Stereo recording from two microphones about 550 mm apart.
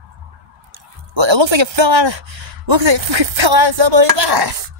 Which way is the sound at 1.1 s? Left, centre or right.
Right.